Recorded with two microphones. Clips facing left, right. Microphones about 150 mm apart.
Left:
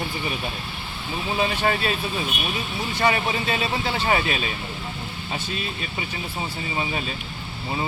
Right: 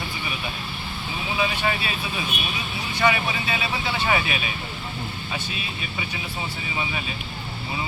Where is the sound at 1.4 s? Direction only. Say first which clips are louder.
Left 2 dB; 40° left (ahead or behind).